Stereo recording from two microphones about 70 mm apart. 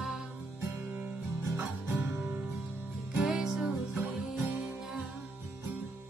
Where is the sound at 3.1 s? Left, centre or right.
Centre.